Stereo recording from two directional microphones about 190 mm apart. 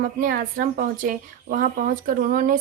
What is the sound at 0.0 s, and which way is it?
Speech, 45° right (ahead or behind).